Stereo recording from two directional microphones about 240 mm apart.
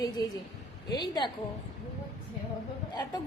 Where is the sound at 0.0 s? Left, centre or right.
Centre.